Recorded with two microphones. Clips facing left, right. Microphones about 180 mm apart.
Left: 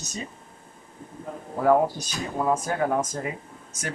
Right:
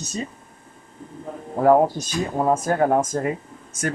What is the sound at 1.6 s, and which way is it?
Speech, 45° right (ahead or behind).